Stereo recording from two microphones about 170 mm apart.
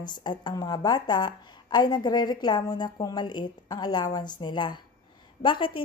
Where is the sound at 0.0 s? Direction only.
25° left (ahead or behind).